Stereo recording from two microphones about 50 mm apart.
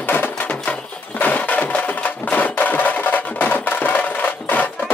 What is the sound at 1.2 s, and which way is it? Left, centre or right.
Music, left.